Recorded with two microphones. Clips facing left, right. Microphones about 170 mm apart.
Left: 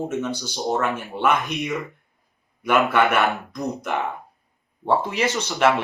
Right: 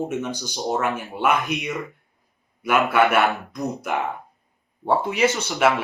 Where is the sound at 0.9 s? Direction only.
Centre (ahead or behind).